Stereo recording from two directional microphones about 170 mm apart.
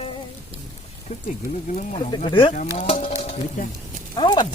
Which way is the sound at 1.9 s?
30° left (ahead or behind).